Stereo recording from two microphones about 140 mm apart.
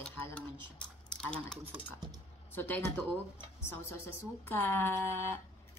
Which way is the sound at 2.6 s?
15° left (ahead or behind).